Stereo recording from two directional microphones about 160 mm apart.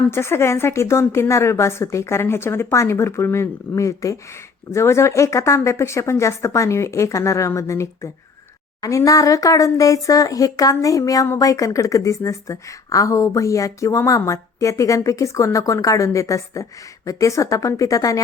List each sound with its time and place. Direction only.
0.1 s a woman's voice: 15° left (ahead or behind)